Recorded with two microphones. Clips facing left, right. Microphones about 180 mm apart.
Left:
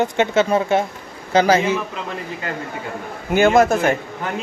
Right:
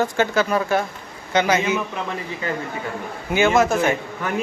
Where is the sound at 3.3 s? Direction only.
50° left (ahead or behind).